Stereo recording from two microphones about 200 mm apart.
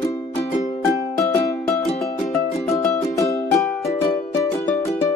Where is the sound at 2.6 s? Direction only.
15° left (ahead or behind).